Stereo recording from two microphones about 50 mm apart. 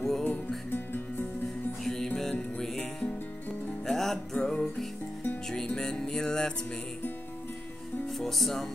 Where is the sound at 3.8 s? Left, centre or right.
Centre.